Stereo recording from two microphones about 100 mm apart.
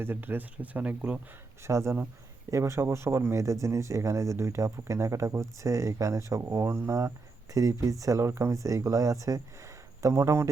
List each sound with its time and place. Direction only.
0.0 s speech: 20° right (ahead or behind)
1.6 s a man's voice: 30° right (ahead or behind)